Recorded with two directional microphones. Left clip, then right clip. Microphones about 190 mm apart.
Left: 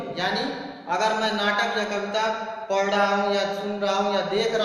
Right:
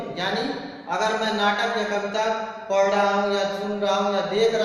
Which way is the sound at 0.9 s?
20° left (ahead or behind).